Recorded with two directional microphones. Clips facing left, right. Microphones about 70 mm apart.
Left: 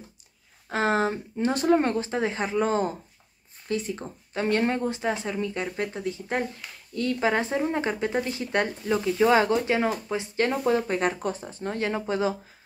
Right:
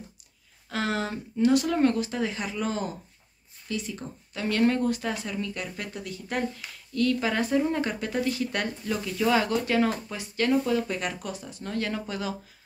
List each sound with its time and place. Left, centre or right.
0.7 s speech: left
6.6 s a sound: centre
7.0 s speech: left